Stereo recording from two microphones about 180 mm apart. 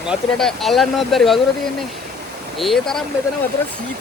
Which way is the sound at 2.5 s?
Centre (ahead or behind).